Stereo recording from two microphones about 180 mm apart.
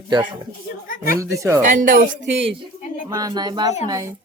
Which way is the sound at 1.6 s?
45° right (ahead or behind).